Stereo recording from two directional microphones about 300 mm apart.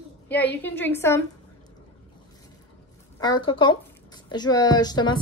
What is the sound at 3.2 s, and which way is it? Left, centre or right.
A woman's voice, centre.